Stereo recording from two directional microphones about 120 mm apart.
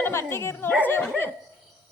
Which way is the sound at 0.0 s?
20° left (ahead or behind).